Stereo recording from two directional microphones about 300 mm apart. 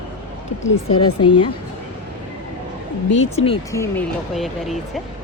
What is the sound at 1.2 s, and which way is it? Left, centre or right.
Speech, left.